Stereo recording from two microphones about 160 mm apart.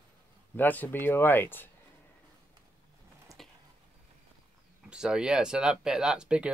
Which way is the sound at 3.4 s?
Centre (ahead or behind).